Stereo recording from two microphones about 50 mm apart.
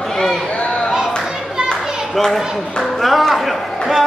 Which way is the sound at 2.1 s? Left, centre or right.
Centre.